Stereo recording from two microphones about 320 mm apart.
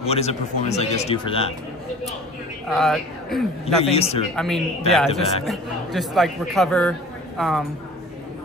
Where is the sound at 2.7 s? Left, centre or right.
Centre.